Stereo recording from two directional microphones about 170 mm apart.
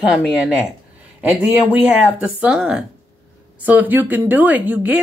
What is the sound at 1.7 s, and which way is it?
Speech, 10° right (ahead or behind).